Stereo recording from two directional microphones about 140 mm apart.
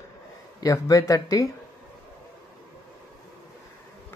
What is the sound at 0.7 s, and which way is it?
Speech, 20° left (ahead or behind).